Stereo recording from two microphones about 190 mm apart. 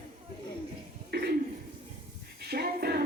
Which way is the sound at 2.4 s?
55° right (ahead or behind).